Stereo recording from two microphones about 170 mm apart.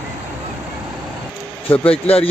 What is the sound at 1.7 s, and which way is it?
Speech, 35° left (ahead or behind).